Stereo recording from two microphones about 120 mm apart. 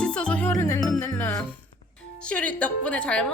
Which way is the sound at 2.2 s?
10° left (ahead or behind).